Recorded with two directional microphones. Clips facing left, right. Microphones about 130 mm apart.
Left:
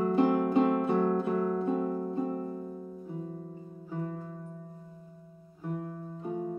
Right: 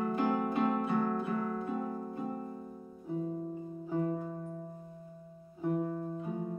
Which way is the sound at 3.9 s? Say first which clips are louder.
Right 4 dB; 20° right (ahead or behind).